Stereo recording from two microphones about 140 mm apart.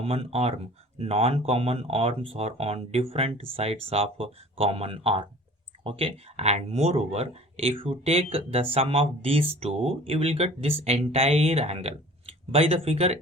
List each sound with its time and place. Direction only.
0.0 s speech: 45° right (ahead or behind)